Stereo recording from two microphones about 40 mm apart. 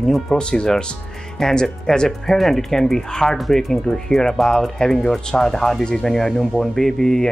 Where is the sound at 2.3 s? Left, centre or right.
Centre.